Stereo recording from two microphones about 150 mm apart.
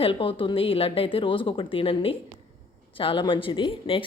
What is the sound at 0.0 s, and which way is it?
A woman's voice, 35° left (ahead or behind).